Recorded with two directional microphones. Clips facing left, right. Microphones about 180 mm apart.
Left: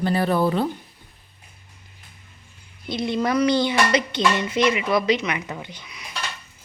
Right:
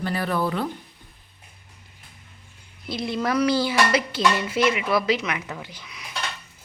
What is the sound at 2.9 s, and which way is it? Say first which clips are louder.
Speech: left 2 dB; 5° right (ahead or behind).